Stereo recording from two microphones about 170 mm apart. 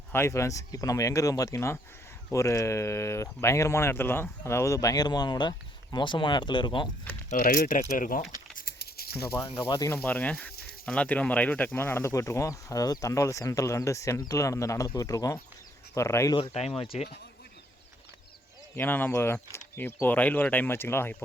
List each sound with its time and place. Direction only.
0.1 s speech: 15° left (ahead or behind)
7.3 s speech: 55° left (ahead or behind)
8.6 s a sound: 65° left (ahead or behind)
9.5 s speech: 30° left (ahead or behind)
9.9 s speech: 10° left (ahead or behind)
16.4 s speech: 35° left (ahead or behind)
18.8 s speech: 10° left (ahead or behind)